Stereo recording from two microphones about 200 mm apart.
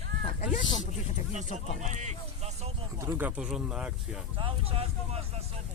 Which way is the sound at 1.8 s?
35° right (ahead or behind).